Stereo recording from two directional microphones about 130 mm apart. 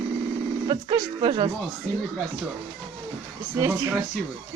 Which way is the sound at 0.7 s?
40° right (ahead or behind).